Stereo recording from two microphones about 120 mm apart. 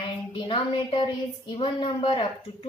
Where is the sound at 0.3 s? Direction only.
45° left (ahead or behind).